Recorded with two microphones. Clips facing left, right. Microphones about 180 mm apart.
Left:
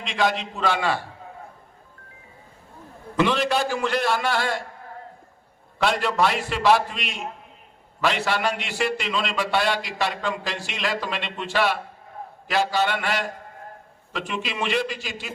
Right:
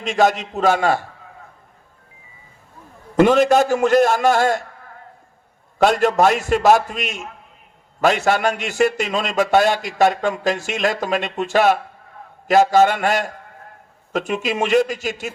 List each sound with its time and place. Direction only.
0.0 s a man's voice: 45° right (ahead or behind)
3.2 s a man's voice: 45° right (ahead or behind)
5.8 s a man's voice: 45° right (ahead or behind)